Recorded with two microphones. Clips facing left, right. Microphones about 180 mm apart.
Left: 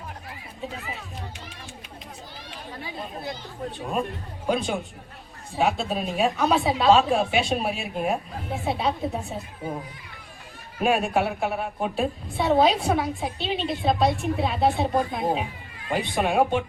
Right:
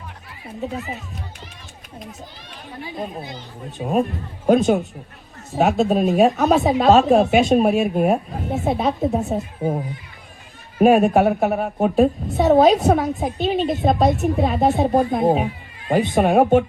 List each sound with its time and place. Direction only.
3.8 s a woman's voice: 45° right (ahead or behind)